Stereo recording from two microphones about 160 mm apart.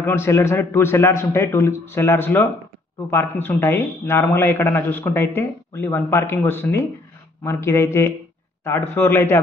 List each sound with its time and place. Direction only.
0.0 s a man's voice: 15° left (ahead or behind)